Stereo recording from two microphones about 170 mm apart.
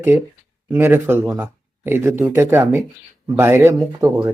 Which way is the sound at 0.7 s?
15° right (ahead or behind).